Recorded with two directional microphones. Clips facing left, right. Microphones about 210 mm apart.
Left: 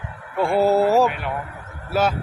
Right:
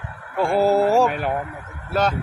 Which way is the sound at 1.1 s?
40° right (ahead or behind).